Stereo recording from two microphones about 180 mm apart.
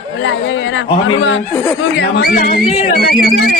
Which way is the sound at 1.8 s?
65° left (ahead or behind).